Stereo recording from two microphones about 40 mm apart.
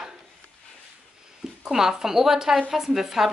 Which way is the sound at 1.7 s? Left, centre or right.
Centre.